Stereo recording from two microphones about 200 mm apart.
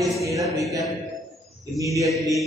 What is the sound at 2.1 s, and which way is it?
Speech, centre (ahead or behind).